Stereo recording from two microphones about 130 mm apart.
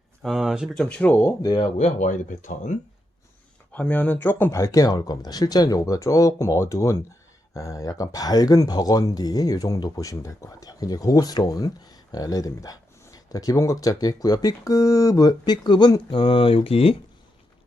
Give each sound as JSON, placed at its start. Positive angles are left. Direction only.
{"t": 0.2, "sound": "speech", "side_deg": -5}
{"t": 1.4, "sound": "speech", "side_deg": 30}
{"t": 1.8, "sound": "speech", "side_deg": 75}
{"t": 3.7, "sound": "speech", "side_deg": 10}
{"t": 4.6, "sound": "speech", "side_deg": 25}